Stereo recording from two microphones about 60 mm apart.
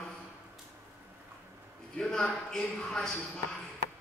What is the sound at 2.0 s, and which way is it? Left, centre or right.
Speech, centre.